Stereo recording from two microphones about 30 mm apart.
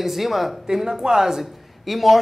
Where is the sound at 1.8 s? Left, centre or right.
Centre.